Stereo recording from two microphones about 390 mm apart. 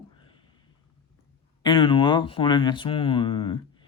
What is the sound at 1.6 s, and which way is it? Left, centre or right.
Speech, centre.